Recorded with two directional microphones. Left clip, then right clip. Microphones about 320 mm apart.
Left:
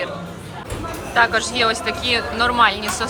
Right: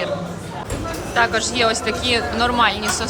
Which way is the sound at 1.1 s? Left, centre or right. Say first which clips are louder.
Left 1 dB; centre.